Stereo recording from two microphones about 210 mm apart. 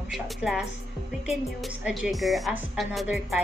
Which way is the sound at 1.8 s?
5° right (ahead or behind).